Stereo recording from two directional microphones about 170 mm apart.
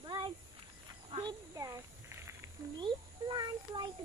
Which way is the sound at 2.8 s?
25° right (ahead or behind).